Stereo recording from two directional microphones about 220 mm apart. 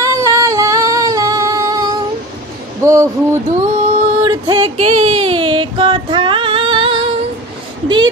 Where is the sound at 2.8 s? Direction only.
15° right (ahead or behind).